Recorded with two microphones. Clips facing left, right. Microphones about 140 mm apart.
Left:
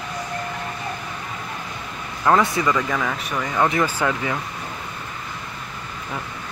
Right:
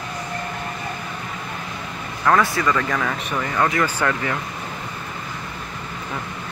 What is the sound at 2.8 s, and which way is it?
Speech, 5° left (ahead or behind).